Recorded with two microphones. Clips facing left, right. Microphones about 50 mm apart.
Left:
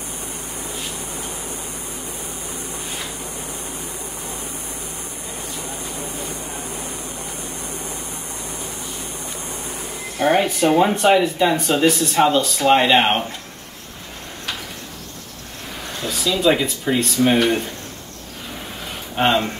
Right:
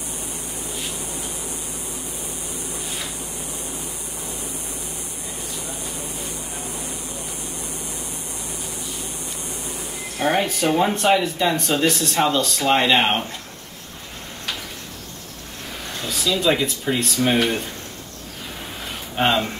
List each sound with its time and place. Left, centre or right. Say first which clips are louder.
4.3 s vehicle: right 1 dB; left
6.6 s a sound: left 2 dB; left
9.2 s vehicle: left 2 dB; left
10.2 s speech: left 3 dB; centre
16.0 s speech: left 2 dB; centre
19.1 s speech: left 2 dB; centre